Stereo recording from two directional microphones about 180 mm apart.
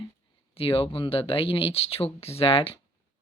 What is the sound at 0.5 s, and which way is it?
Speech, 30° left (ahead or behind).